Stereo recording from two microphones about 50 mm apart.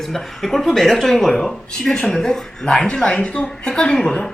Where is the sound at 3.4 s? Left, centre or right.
Centre.